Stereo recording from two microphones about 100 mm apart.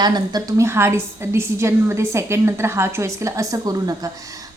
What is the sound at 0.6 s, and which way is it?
A woman's voice, 25° right (ahead or behind).